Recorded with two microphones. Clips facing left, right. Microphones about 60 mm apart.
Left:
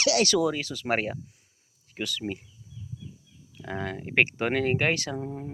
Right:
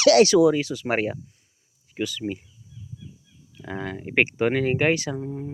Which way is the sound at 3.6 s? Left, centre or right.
Centre.